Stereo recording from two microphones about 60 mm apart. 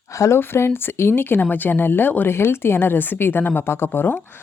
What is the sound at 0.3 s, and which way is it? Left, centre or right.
A woman's voice, left.